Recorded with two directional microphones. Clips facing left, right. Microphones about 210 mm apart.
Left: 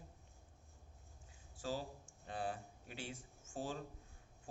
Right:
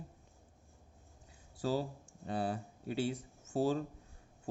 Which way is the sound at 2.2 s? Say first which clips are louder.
Right 7 dB; 35° right (ahead or behind).